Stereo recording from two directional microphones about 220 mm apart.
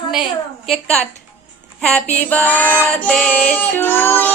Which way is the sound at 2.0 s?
30° left (ahead or behind).